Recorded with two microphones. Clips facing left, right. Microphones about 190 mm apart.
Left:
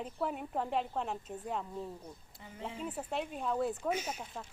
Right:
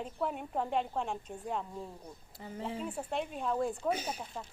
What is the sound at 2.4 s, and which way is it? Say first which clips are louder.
Speech: right 9 dB; 35° right (ahead or behind).